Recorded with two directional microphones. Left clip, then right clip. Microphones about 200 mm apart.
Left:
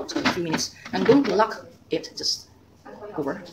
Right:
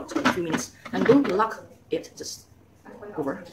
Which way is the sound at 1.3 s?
10° left (ahead or behind).